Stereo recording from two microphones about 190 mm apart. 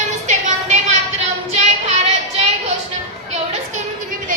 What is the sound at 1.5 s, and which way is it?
Child singing, 35° right (ahead or behind).